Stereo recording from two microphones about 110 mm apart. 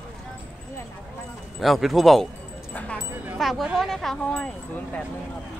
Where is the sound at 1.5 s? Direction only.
Centre (ahead or behind).